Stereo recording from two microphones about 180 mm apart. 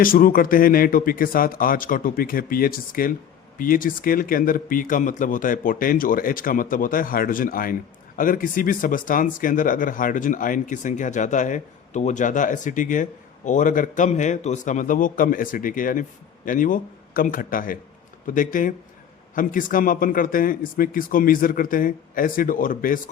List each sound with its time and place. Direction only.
0.0 s speech: 50° left (ahead or behind)